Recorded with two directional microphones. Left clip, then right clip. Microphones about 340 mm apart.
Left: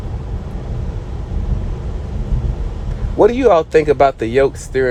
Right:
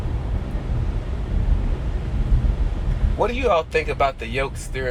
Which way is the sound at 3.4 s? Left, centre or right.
Left.